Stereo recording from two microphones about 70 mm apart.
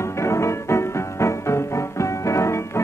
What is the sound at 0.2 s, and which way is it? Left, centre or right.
Music, left.